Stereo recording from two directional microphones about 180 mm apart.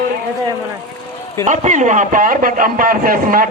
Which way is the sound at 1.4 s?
45° right (ahead or behind).